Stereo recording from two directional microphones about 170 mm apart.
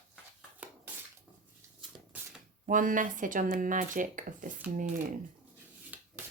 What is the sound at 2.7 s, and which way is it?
Speech, 50° right (ahead or behind).